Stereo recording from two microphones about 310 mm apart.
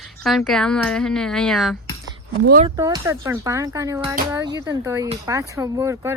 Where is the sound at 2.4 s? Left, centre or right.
Right.